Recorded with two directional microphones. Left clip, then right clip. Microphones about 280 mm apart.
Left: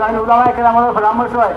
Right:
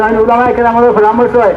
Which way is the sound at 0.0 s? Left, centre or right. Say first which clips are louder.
Right 3 dB; centre.